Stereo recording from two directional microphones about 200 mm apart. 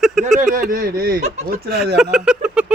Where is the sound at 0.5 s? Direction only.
45° right (ahead or behind).